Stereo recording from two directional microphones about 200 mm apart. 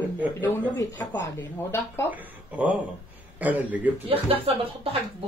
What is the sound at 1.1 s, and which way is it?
Speech, 60° left (ahead or behind).